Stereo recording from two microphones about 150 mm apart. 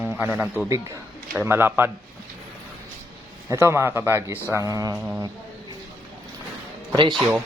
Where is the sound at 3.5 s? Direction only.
15° right (ahead or behind).